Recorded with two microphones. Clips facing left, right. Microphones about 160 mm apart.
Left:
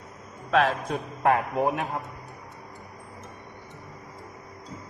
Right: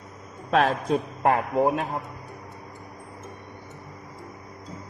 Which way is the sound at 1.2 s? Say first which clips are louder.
Even; 20° right (ahead or behind).